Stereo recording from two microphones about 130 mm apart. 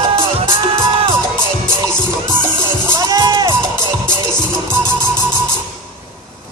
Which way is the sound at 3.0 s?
30° right (ahead or behind).